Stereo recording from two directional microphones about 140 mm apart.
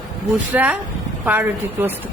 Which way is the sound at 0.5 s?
10° right (ahead or behind).